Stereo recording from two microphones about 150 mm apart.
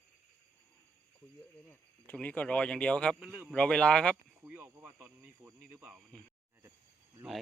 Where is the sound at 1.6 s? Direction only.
10° left (ahead or behind).